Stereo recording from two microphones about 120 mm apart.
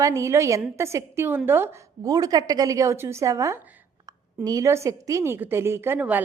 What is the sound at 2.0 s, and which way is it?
A woman's voice, 30° right (ahead or behind).